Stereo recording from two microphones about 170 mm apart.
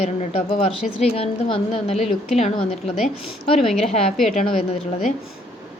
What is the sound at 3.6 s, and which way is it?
A woman's voice, 40° left (ahead or behind).